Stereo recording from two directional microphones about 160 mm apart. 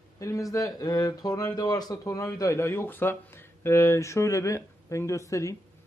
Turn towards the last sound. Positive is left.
turn(degrees=20)  # may be behind; listen again after turning